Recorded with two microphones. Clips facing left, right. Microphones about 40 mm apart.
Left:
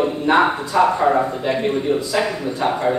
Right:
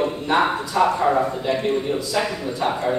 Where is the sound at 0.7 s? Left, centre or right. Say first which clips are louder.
Left 2 dB; left.